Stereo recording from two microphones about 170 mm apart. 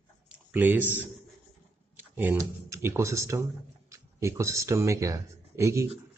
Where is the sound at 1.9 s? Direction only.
10° right (ahead or behind).